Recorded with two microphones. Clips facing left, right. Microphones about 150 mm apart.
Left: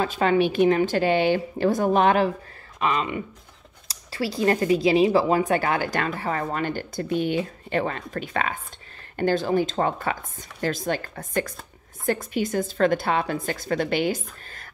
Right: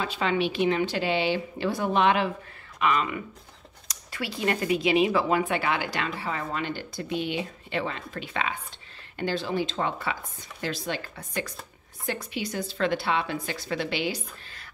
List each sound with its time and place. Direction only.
0.0 s speech: 45° left (ahead or behind)
2.8 s speech: 30° left (ahead or behind); by 14.7 s 45° left (ahead or behind)